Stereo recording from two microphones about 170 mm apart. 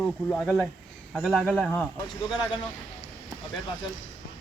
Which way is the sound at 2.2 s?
25° left (ahead or behind).